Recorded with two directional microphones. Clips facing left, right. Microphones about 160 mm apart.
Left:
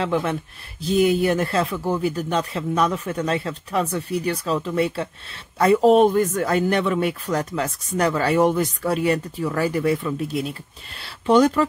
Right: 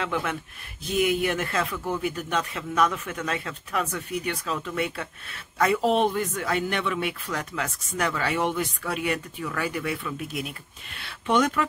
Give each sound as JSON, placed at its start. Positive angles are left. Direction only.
{"t": 0.0, "sound": "speech", "side_deg": 35}